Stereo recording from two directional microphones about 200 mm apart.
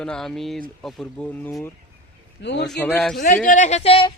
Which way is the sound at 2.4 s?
60° left (ahead or behind).